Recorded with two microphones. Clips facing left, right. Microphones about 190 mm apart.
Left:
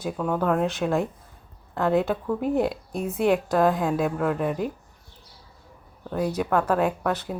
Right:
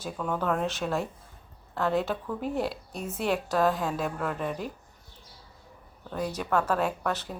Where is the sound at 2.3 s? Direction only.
50° left (ahead or behind).